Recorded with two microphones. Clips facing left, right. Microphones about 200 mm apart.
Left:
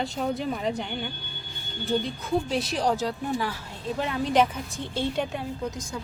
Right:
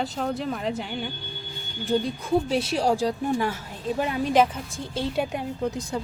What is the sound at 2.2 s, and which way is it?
Speech, 10° right (ahead or behind).